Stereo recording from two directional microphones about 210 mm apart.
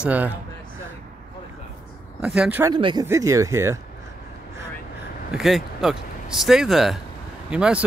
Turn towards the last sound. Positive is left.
turn(degrees=-5)  # may be behind; listen again after turning